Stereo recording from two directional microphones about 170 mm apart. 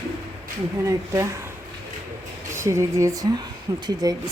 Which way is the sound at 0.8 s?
15° right (ahead or behind).